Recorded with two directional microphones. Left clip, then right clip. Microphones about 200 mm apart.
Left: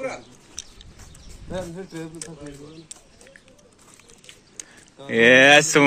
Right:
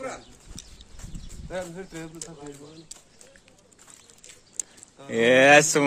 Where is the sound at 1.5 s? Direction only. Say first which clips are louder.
Left 2 dB; centre (ahead or behind).